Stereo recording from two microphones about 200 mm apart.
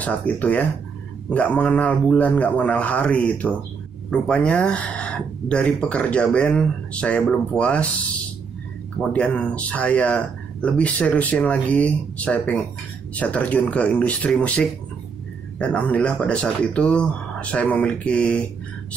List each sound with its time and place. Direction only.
0.0 s speech: 5° left (ahead or behind)
9.1 s speech: 5° left (ahead or behind)